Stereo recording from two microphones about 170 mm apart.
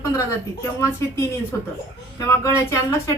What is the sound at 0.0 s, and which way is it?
Speech, 15° left (ahead or behind).